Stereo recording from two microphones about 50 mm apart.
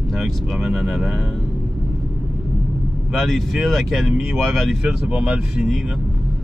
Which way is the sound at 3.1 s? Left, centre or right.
Centre.